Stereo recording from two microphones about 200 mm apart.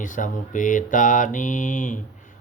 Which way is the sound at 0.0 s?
40° left (ahead or behind).